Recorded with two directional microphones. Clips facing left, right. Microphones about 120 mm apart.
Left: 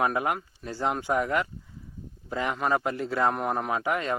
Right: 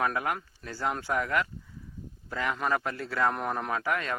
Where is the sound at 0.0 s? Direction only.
20° left (ahead or behind).